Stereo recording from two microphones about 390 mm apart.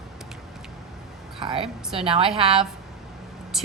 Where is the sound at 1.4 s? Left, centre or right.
Centre.